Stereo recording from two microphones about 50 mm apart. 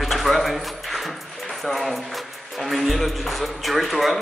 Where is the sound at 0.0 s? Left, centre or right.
Centre.